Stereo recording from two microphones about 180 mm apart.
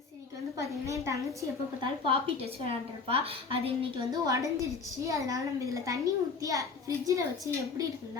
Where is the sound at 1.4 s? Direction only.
25° right (ahead or behind).